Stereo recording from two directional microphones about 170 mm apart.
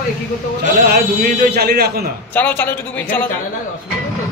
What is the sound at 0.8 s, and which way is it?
Speech, 70° right (ahead or behind).